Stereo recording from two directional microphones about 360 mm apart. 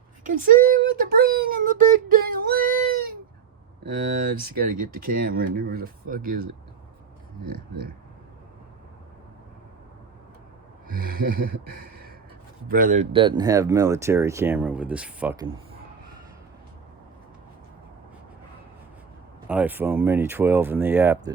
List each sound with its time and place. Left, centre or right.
0.3 s speech: right
4.2 s speech: right
7.4 s speech: right
10.9 s speech: right; by 15.4 s centre
19.5 s speech: centre